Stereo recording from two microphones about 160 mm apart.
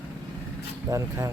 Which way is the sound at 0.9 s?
20° right (ahead or behind).